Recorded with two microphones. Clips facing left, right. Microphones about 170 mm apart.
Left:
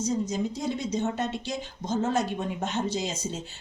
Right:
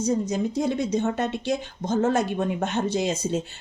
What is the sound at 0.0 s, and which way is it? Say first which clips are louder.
Speech: right 4 dB; 60° right (ahead or behind).